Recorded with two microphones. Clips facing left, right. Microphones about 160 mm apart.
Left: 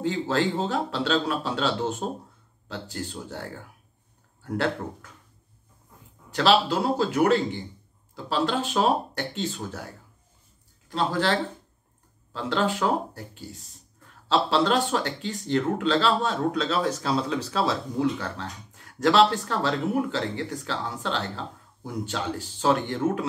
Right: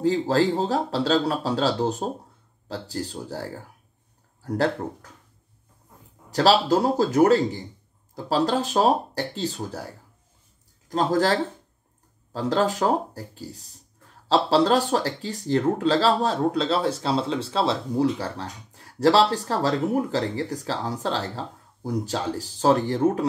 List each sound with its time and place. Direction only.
0.0 s speech: 35° right (ahead or behind)
6.3 s speech: 40° right (ahead or behind)